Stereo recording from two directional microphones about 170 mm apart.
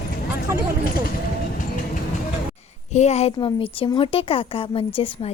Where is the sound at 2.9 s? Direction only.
40° left (ahead or behind).